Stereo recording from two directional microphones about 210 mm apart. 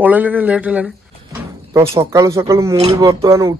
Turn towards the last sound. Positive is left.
turn(degrees=-15)  # may be behind; listen again after turning